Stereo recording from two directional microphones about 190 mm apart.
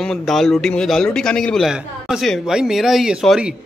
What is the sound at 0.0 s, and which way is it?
Speech, centre (ahead or behind).